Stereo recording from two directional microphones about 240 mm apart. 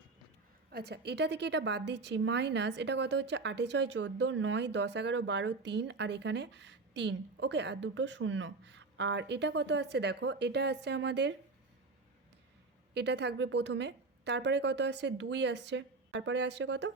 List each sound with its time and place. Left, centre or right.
0.7 s a woman's voice: right
12.9 s a woman's voice: right